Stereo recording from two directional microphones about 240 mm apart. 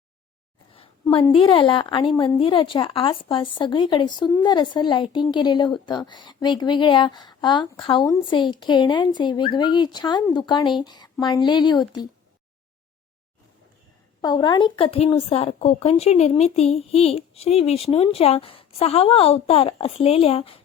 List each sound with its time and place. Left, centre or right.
0.7 s a woman's voice: left
14.2 s a woman's voice: centre